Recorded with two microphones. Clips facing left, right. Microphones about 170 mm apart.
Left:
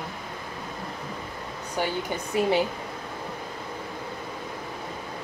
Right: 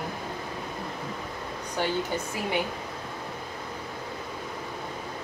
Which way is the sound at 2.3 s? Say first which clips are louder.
Left 8 dB; 25° left (ahead or behind).